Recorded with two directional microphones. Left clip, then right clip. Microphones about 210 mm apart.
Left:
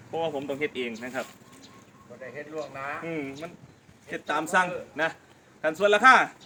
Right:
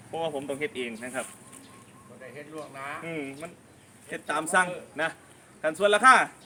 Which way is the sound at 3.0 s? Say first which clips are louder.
Left 2 dB; 5° right (ahead or behind).